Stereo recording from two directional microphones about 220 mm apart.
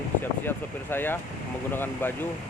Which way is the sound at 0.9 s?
10° left (ahead or behind).